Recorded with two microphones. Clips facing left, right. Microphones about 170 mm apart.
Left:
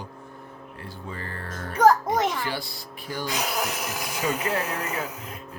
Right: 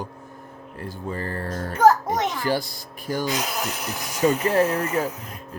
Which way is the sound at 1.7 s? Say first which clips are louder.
Right 1 dB; 5° right (ahead or behind).